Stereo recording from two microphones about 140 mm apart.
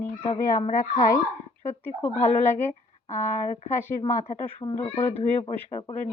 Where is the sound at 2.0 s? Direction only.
15° left (ahead or behind).